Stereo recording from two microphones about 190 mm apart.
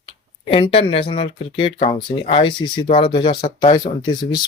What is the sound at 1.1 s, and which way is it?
Speech, 30° left (ahead or behind).